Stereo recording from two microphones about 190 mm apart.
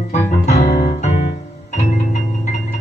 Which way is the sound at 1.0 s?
40° left (ahead or behind).